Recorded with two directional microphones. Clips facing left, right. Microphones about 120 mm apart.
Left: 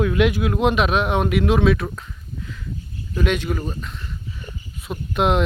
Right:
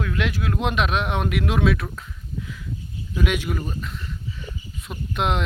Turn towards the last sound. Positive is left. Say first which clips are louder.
# left 5 dB
turn(degrees=0)  # may be behind; listen again after turning